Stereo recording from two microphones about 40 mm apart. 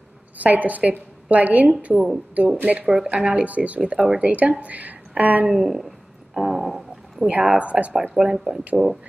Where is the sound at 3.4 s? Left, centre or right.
Right.